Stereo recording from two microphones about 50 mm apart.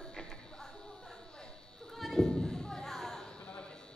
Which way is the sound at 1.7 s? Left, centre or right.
Centre.